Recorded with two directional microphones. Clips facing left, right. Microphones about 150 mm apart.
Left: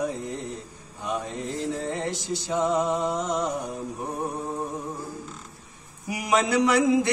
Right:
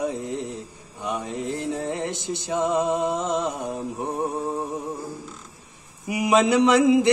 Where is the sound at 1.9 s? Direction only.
20° right (ahead or behind).